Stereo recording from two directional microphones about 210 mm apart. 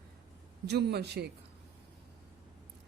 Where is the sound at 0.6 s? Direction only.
50° right (ahead or behind).